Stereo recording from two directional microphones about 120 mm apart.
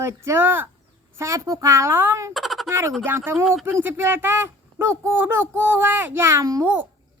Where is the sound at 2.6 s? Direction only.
20° right (ahead or behind).